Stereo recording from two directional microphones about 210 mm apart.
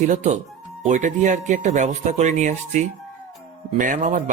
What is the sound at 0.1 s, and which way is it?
Speech, 35° right (ahead or behind).